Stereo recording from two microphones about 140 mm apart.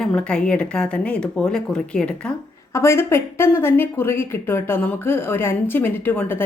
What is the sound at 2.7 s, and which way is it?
Speech, 20° left (ahead or behind).